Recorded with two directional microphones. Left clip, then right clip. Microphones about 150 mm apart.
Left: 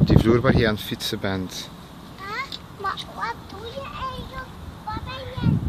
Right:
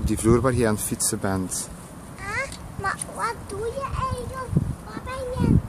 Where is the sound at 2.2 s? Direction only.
25° right (ahead or behind).